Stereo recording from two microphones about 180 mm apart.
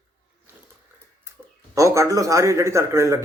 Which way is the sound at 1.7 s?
15° right (ahead or behind).